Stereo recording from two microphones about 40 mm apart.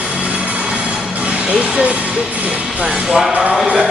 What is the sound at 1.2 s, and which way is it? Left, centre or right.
Music, right.